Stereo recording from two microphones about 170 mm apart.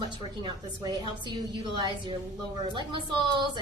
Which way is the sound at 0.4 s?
25° right (ahead or behind).